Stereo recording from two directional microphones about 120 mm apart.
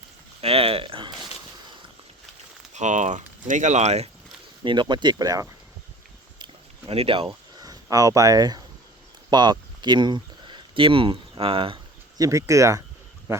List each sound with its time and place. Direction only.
0.4 s a sound: 50° right (ahead or behind)
2.7 s speech: 85° right; by 4.1 s 65° right (ahead or behind)
4.6 s speech: 40° right (ahead or behind)
6.9 s speech: 55° right (ahead or behind)
7.5 s speech: 30° right (ahead or behind); by 11.8 s 50° right (ahead or behind)
12.1 s speech: 30° right (ahead or behind)